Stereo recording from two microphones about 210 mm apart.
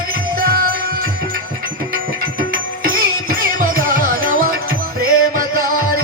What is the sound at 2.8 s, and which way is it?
Music, 45° right (ahead or behind).